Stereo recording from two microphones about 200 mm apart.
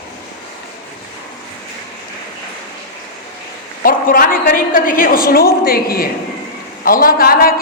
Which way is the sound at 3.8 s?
45° left (ahead or behind).